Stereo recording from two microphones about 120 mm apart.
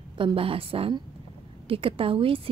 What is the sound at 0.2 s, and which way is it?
Speech, 50° right (ahead or behind).